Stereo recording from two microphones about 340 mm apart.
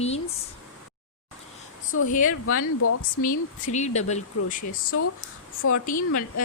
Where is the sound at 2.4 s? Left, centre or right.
Left.